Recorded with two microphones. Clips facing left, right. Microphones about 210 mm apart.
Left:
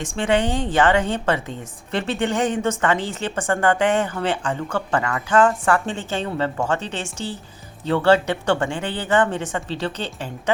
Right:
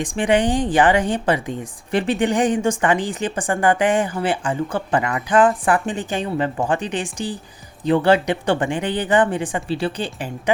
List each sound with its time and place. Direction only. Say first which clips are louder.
0.0 s a woman's voice: right 3 dB; 15° right (ahead or behind)